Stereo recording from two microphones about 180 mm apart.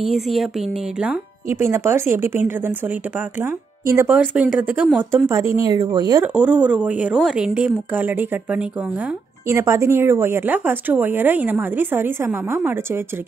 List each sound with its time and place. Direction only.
0.0 s speech: centre (ahead or behind); by 6.2 s 20° right (ahead or behind)
6.2 s speech: 10° right (ahead or behind)